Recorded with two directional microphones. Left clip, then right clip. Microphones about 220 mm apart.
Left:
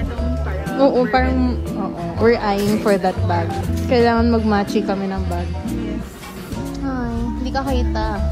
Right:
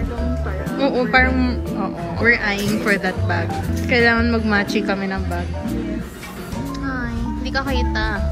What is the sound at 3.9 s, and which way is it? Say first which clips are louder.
A woman's voice: left 1 dB; 15° left (ahead or behind).